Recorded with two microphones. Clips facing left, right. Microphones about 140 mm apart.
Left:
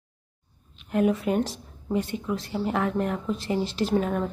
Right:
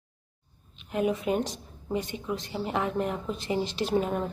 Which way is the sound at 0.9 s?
10° right (ahead or behind).